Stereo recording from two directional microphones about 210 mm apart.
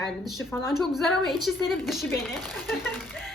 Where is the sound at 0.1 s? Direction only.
Centre (ahead or behind).